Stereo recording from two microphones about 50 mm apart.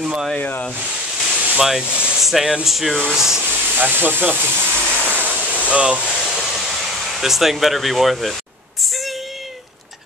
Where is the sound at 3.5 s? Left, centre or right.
Right.